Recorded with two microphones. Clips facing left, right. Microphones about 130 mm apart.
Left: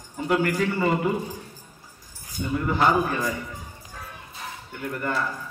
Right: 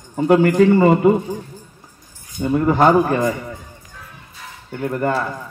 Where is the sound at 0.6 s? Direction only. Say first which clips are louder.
Right 11 dB; 50° right (ahead or behind).